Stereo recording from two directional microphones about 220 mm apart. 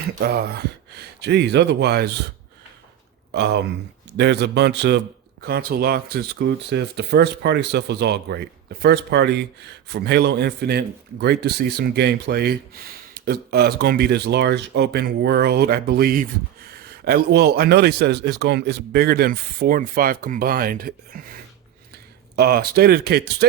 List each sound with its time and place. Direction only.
0.2 s a man's voice: 45° right (ahead or behind)
3.3 s a man's voice: 50° right (ahead or behind)